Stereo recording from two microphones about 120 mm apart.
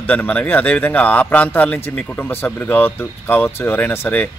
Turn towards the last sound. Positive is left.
turn(degrees=15)  # may be behind; listen again after turning